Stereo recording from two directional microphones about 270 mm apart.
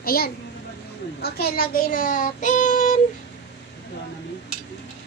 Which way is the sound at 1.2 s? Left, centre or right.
Left.